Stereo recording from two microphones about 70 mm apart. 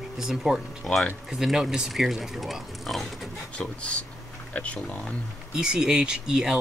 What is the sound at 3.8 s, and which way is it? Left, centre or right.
Speech, centre.